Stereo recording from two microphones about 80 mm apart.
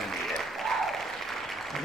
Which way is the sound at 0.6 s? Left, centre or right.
Centre.